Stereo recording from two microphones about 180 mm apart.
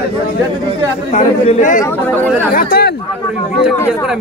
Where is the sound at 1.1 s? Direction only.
45° left (ahead or behind).